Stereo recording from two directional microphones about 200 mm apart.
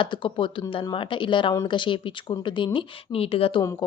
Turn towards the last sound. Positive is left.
turn(degrees=30)  # may be behind; listen again after turning